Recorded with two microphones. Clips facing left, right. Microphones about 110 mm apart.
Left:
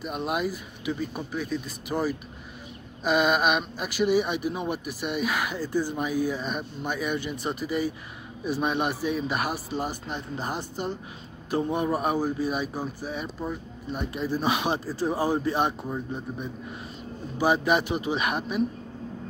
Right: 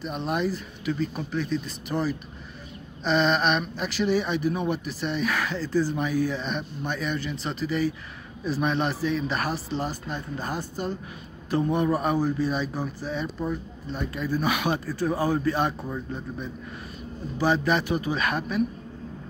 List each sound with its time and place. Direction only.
0.0 s speech: 5° left (ahead or behind)
14.1 s speech: 25° left (ahead or behind)